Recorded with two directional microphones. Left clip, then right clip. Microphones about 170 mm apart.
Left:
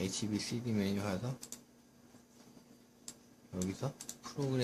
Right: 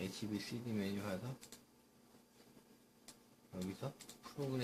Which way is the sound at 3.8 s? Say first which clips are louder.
Left 6 dB; 45° left (ahead or behind).